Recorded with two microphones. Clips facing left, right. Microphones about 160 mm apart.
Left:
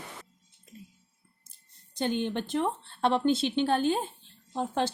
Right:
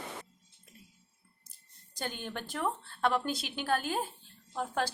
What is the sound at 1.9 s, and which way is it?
Speech, 25° left (ahead or behind).